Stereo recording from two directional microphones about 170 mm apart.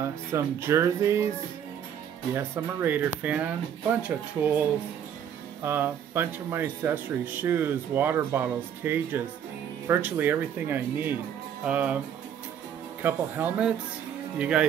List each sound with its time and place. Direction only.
0.0 s speech: 15° right (ahead or behind)
2.3 s speech: 10° right (ahead or behind)
13.0 s speech: 10° right (ahead or behind)